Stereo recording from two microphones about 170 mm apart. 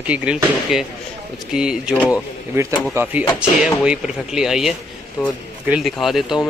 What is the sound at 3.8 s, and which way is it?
Speech, 5° right (ahead or behind).